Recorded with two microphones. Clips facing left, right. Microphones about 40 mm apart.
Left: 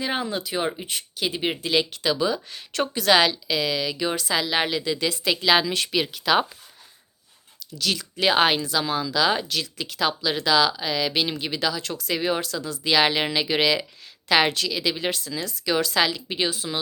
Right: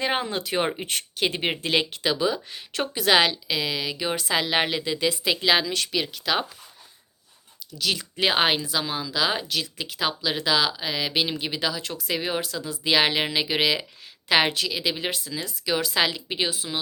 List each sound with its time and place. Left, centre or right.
0.0 s speech: right
2.1 s speech: centre
4.2 s a woman's voice: right
5.6 s speech: centre
7.8 s speech: centre